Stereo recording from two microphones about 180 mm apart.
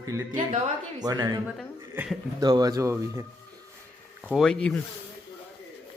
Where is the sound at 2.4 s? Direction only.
20° right (ahead or behind).